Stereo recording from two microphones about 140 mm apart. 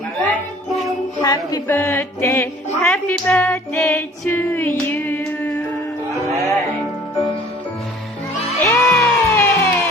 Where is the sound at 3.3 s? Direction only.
10° left (ahead or behind).